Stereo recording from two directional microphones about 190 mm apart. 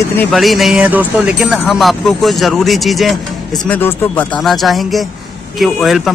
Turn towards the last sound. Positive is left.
turn(degrees=0)  # may be behind; listen again after turning